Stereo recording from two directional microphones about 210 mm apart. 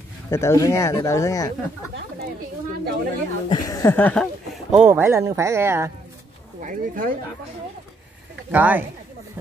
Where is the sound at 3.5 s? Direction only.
20° left (ahead or behind).